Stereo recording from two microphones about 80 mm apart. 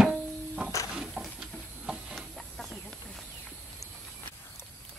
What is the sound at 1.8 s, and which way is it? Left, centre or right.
Chicken, centre.